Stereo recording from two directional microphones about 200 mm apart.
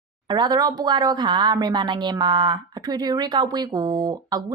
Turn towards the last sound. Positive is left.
turn(degrees=-20)  # may be behind; listen again after turning